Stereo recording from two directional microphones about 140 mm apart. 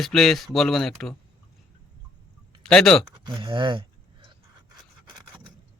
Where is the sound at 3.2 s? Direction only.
35° right (ahead or behind).